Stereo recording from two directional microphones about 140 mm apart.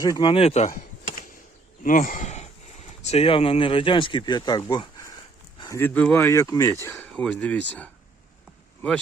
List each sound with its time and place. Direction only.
0.0 s speech: 30° left (ahead or behind); by 0.8 s 50° left (ahead or behind)
1.8 s speech: 70° left (ahead or behind); by 5.1 s 30° left (ahead or behind)
5.5 s a sound: 25° left (ahead or behind)
5.8 s speech: 10° left (ahead or behind)
6.8 s speech: 15° left (ahead or behind)